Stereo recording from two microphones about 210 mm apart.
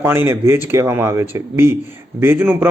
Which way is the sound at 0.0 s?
10° right (ahead or behind).